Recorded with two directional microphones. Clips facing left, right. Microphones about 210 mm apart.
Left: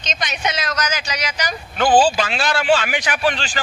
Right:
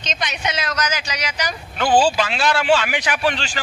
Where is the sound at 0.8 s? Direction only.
45° left (ahead or behind).